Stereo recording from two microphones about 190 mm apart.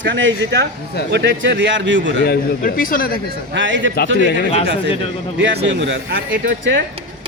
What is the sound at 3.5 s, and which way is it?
Speech, 75° right (ahead or behind).